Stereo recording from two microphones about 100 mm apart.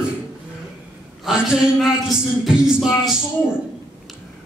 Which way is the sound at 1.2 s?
5° right (ahead or behind).